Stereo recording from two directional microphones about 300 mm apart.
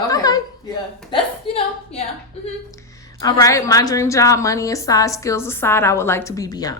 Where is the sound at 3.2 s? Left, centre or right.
Centre.